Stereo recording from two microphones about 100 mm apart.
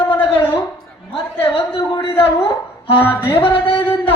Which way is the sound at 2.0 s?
70° left (ahead or behind).